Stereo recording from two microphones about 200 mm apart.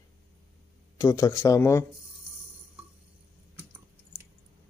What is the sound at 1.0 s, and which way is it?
Speech, 15° left (ahead or behind).